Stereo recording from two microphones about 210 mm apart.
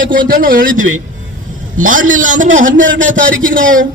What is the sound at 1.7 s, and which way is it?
A man's voice, 40° right (ahead or behind).